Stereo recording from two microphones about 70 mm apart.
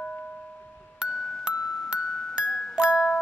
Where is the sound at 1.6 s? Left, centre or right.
Centre.